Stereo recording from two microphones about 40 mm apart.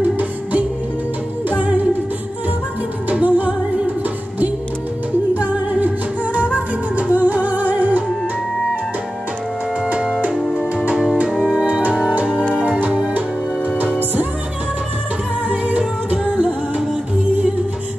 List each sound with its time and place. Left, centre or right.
0.2 s music: right
3.1 s music: right
5.4 s music: right
11.5 s music: right
12.3 s music: left
15.5 s music: right